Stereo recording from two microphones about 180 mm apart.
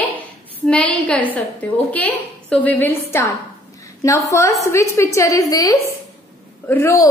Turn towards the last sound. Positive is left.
turn(degrees=15)  # may be behind; listen again after turning